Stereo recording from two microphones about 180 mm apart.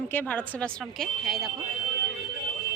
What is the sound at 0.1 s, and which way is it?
A woman's voice, 10° left (ahead or behind).